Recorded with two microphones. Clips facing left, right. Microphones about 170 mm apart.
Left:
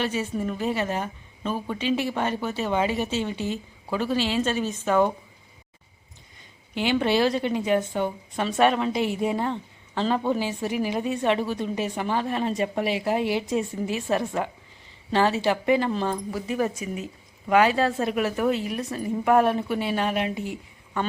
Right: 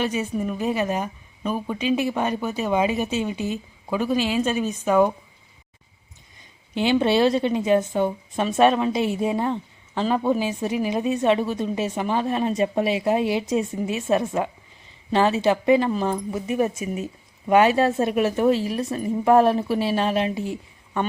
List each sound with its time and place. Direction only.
0.0 s a woman's voice: 15° right (ahead or behind)
6.7 s a woman's voice: 20° right (ahead or behind)
15.9 s a woman's voice: 10° right (ahead or behind)
16.3 s a woman's voice: 20° right (ahead or behind)
20.5 s a sound: 25° right (ahead or behind)